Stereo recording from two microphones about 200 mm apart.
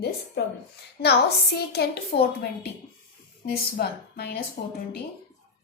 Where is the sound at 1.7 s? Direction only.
50° left (ahead or behind).